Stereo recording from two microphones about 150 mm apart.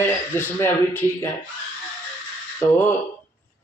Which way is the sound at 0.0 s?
15° left (ahead or behind).